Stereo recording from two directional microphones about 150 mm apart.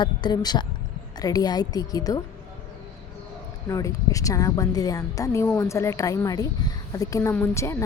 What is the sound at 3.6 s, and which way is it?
Speech, 20° left (ahead or behind).